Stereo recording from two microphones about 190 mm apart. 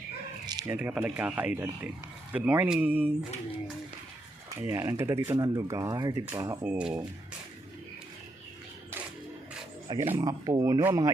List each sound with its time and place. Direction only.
0.4 s sheep: 20° right (ahead or behind)
0.7 s speech: 10° right (ahead or behind)
4.6 s speech: 15° right (ahead or behind)
9.9 s speech: 25° right (ahead or behind)